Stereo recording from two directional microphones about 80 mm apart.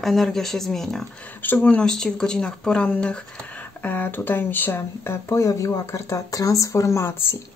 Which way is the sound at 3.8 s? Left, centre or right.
Left.